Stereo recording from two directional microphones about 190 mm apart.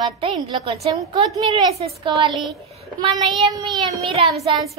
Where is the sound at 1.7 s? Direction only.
30° right (ahead or behind).